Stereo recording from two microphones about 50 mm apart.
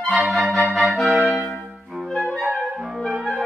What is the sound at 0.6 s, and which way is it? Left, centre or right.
Music, centre.